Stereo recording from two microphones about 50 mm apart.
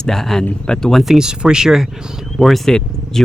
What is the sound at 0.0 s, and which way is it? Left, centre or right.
Speech, centre.